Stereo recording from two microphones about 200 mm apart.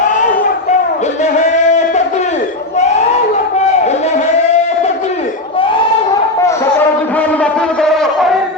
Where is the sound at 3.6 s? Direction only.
35° left (ahead or behind).